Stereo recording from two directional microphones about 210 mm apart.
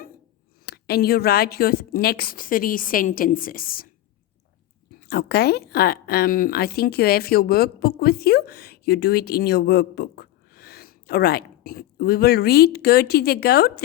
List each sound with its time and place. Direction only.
0.6 s speech: 50° left (ahead or behind)
4.9 s speech: 50° left (ahead or behind)